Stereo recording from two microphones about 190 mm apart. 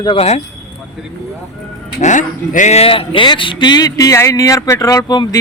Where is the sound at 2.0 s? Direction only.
40° left (ahead or behind).